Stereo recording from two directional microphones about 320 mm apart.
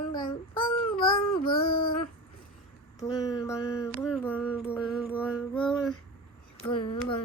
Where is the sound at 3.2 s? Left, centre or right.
Centre.